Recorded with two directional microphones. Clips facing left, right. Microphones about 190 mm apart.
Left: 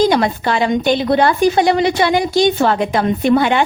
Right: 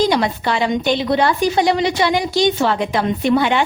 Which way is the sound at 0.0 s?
50° left (ahead or behind).